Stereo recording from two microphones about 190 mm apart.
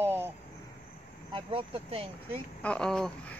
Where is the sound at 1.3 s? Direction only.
30° right (ahead or behind).